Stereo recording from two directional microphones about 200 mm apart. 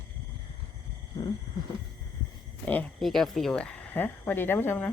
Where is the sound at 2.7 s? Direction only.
5° left (ahead or behind).